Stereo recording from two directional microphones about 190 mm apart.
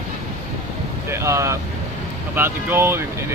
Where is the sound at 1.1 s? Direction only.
15° right (ahead or behind).